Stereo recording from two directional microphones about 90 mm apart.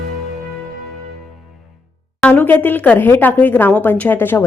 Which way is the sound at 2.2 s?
15° left (ahead or behind).